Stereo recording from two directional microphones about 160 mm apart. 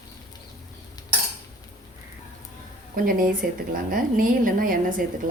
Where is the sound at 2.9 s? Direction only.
60° right (ahead or behind).